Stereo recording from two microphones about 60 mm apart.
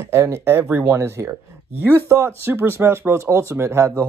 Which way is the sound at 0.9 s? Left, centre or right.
Right.